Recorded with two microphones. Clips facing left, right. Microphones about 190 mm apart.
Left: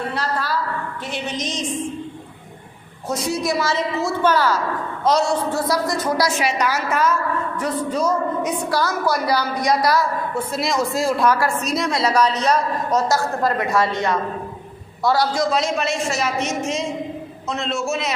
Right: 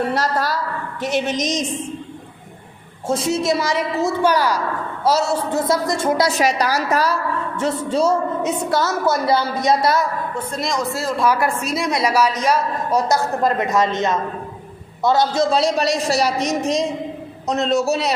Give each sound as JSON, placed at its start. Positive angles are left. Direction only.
{"t": 0.1, "sound": "a sound", "side_deg": -40}
{"t": 1.4, "sound": "a woman's voice", "side_deg": -40}
{"t": 3.1, "sound": "a woman's voice", "side_deg": -25}
{"t": 5.5, "sound": "a woman's voice", "side_deg": -20}
{"t": 6.3, "sound": "a man's voice", "side_deg": -40}
{"t": 10.3, "sound": "speech", "side_deg": 5}
{"t": 11.3, "sound": "a woman's voice", "side_deg": -15}
{"t": 11.6, "sound": "a woman's voice", "side_deg": -5}